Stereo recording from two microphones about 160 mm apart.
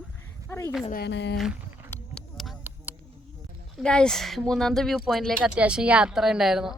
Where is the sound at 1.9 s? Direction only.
5° left (ahead or behind).